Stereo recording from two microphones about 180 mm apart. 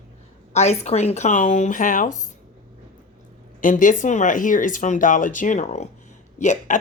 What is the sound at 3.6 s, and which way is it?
Speech, 45° left (ahead or behind).